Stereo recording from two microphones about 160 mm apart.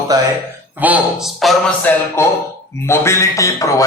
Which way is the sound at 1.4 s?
Centre (ahead or behind).